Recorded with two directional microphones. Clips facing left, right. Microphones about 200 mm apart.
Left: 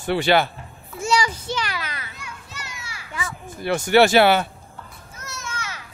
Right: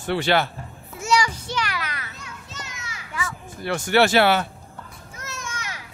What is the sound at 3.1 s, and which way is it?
Children playing, 25° left (ahead or behind).